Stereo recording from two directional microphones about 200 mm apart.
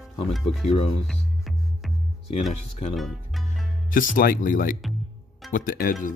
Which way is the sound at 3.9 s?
45° left (ahead or behind).